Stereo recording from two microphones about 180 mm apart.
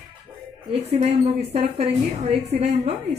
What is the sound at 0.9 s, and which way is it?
Speech, 35° right (ahead or behind).